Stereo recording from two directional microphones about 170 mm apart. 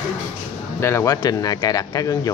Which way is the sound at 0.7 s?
15° left (ahead or behind).